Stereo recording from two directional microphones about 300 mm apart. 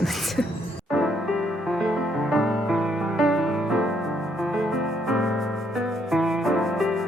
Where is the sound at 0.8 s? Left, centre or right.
Centre.